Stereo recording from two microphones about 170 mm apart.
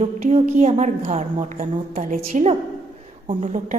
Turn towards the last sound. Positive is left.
turn(degrees=-30)  # may be behind; listen again after turning